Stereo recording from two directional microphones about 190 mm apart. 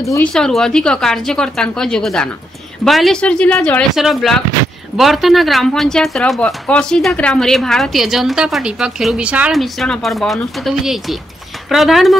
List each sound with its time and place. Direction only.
0.0 s speech: 15° left (ahead or behind)
0.3 s speech: centre (ahead or behind)